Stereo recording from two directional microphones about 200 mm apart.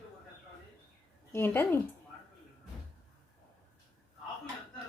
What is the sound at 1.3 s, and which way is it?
Speech, 10° left (ahead or behind).